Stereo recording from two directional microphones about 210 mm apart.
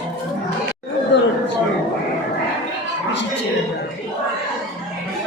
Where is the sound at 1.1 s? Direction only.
60° left (ahead or behind).